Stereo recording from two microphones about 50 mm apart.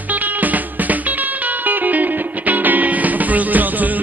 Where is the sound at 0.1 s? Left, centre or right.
Right.